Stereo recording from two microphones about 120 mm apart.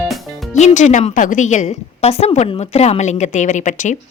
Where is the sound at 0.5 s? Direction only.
80° left.